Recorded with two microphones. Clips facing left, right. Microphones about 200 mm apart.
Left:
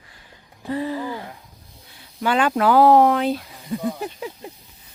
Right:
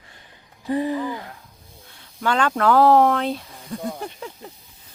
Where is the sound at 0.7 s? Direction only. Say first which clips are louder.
Right 3 dB; 20° right (ahead or behind).